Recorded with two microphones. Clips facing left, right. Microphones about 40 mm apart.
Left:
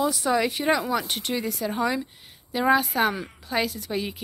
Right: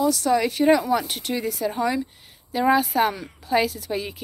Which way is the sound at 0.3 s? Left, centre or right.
Centre.